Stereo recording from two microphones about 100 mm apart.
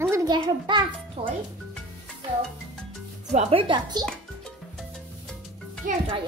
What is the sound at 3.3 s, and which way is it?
Speech, 60° right (ahead or behind).